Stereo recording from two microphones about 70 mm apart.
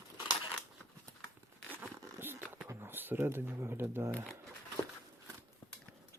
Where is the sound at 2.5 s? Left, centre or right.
Right.